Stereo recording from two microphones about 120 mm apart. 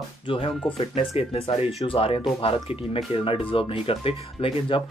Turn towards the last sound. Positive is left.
turn(degrees=45)  # may be behind; listen again after turning